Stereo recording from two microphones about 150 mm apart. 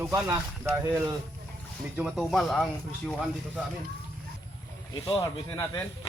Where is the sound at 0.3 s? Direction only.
15° right (ahead or behind).